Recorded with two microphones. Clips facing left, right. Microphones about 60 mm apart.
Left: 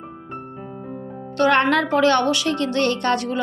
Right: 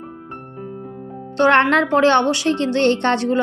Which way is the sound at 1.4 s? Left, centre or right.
Right.